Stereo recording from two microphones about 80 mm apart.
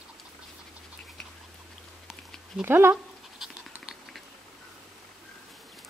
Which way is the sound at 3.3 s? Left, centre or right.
Centre.